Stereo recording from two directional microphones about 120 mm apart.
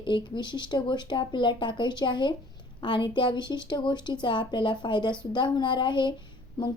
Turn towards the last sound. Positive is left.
turn(degrees=35)  # may be behind; listen again after turning